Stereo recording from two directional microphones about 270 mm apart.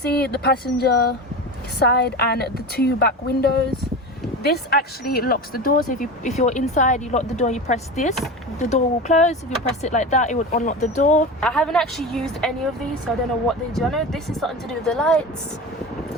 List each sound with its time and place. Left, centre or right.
0.0 s speech: left
11.3 s speech: centre
13.5 s speech: centre